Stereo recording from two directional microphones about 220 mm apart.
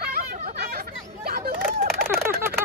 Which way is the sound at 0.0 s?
45° right (ahead or behind).